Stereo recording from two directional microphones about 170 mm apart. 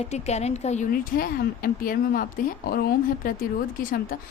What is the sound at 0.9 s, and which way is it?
Speech, 55° left (ahead or behind).